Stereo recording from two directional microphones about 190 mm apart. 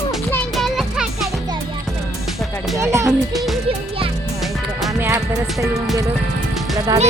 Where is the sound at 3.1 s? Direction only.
Centre (ahead or behind).